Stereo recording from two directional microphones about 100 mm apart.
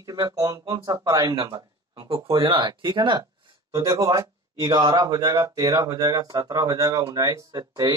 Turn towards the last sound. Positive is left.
turn(degrees=-35)  # may be behind; listen again after turning